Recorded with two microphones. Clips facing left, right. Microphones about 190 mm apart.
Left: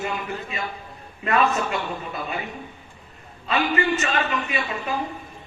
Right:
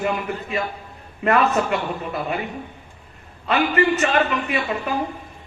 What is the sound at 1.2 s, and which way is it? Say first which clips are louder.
Speech: right 3 dB; 65° right (ahead or behind).